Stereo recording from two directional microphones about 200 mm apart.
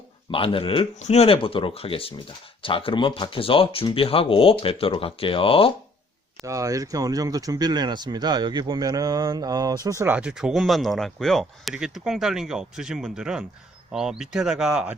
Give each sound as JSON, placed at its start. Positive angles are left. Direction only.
{"t": 0.3, "sound": "speech", "side_deg": 25}
{"t": 6.4, "sound": "speech", "side_deg": -15}